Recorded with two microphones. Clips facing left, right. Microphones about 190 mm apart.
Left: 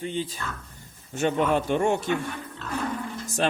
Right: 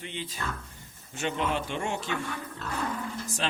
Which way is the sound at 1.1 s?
45° left (ahead or behind).